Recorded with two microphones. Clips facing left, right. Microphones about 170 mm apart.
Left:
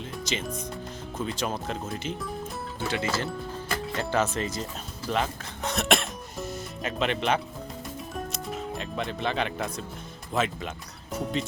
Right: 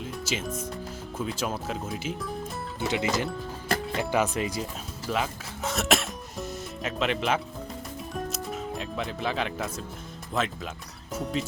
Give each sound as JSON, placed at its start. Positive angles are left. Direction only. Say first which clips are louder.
{"t": 0.0, "sound": "music", "louder": "even", "side_deg": -5}
{"t": 1.2, "sound": "speech", "louder": "even", "side_deg": -5}
{"t": 2.8, "sound": "speech", "louder": "right 2 dB", "side_deg": -20}
{"t": 8.1, "sound": "music", "louder": "right 2 dB", "side_deg": 0}
{"t": 10.3, "sound": "speech", "louder": "left 2 dB", "side_deg": 0}